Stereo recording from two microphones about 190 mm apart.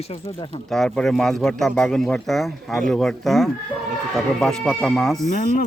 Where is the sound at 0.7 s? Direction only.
Centre (ahead or behind).